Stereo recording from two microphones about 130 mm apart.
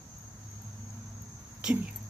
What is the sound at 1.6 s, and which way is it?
Speech, 5° right (ahead or behind).